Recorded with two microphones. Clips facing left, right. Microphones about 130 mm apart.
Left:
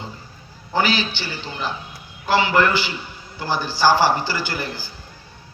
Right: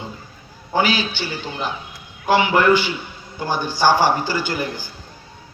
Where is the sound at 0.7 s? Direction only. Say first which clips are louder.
Right 1 dB; 15° right (ahead or behind).